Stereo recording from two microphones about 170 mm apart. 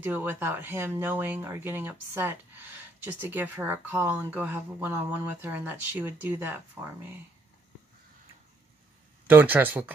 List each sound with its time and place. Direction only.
0.0 s speech: 10° right (ahead or behind)
9.3 s speech: 10° right (ahead or behind)